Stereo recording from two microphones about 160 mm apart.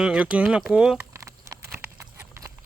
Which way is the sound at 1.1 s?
20° right (ahead or behind).